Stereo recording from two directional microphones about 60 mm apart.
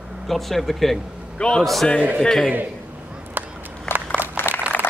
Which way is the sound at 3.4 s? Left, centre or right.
Right.